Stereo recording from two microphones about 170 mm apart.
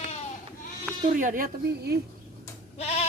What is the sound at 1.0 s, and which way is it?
Speech, 50° right (ahead or behind).